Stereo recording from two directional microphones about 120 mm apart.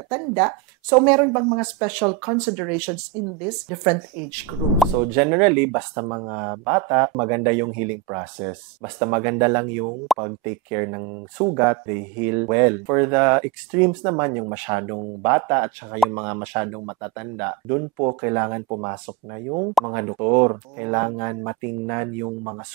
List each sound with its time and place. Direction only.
0.1 s speech: 15° right (ahead or behind)
4.7 s speech: 10° right (ahead or behind)